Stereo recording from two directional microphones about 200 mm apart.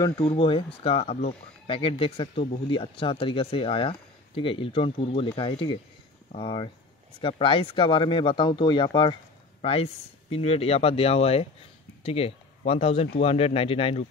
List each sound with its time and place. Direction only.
0.0 s speech: 25° left (ahead or behind)